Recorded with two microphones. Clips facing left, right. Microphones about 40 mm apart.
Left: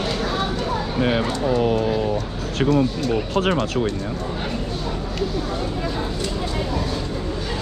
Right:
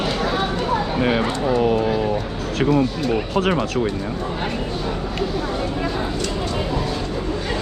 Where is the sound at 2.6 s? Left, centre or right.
Centre.